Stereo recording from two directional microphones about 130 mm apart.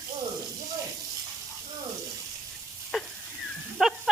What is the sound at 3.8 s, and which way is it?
Dog, 5° right (ahead or behind).